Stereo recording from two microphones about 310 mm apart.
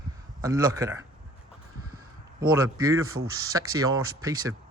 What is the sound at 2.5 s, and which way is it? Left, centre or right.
A man's voice, centre.